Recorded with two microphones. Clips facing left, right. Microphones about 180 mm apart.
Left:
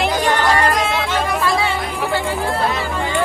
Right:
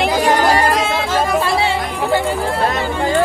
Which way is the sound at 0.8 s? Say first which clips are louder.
Right 2 dB; centre (ahead or behind).